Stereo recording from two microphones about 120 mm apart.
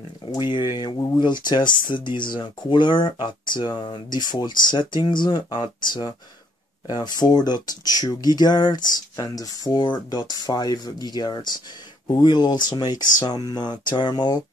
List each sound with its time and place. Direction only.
0.2 s speech: 40° left (ahead or behind)